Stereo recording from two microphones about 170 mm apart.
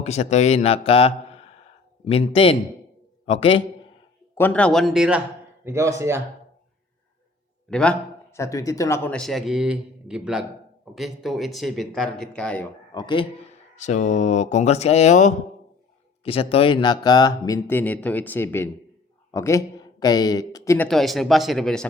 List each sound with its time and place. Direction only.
0.0 s speech: 40° left (ahead or behind)
4.4 s speech: 10° left (ahead or behind)
5.6 s speech: 15° right (ahead or behind)
7.7 s a sound: 5° left (ahead or behind)
8.4 s speech: 20° left (ahead or behind)
9.1 s speech: centre (ahead or behind)
12.9 s speech: 25° left (ahead or behind)
13.7 s speech: 45° left (ahead or behind)
16.2 s speech: 35° left (ahead or behind)
20.7 s speech: 5° left (ahead or behind)